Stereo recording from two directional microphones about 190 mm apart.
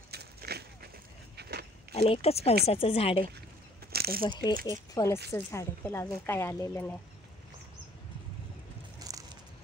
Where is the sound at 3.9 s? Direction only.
55° right (ahead or behind).